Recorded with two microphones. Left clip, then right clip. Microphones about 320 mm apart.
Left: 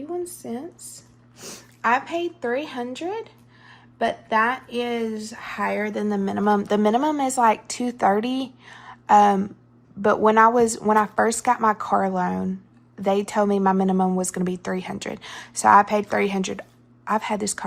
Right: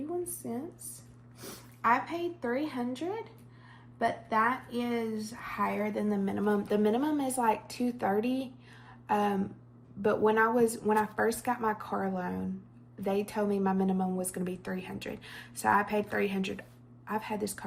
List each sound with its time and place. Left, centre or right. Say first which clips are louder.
0.4 s speech: left 6 dB; left